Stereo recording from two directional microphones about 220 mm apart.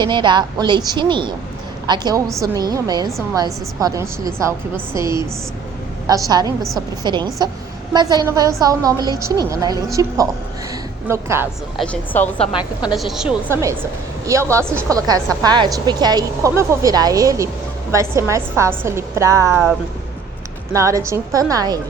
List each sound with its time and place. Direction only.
0.0 s a woman's voice: 20° right (ahead or behind)
11.8 s a woman's voice: 5° left (ahead or behind)
14.3 s a woman's voice: 15° right (ahead or behind)
20.7 s a woman's voice: 15° right (ahead or behind)